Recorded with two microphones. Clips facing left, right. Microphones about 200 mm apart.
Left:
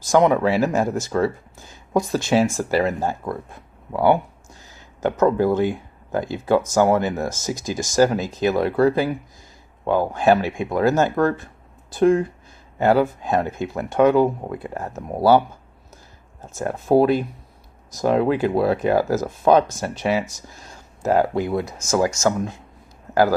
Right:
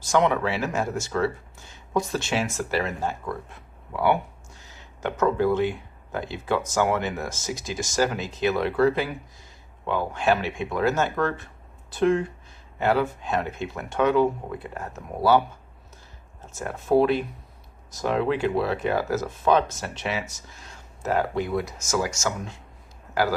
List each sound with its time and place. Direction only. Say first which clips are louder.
0.1 s speech: left 6 dB; 35° left (ahead or behind)
16.6 s speech: left 4 dB; 40° left (ahead or behind)
20.6 s a sound: left 6 dB; 40° left (ahead or behind)
21.8 s speech: left 10 dB; 50° left (ahead or behind)